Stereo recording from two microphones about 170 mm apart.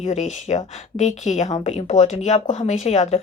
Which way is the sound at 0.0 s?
45° left (ahead or behind).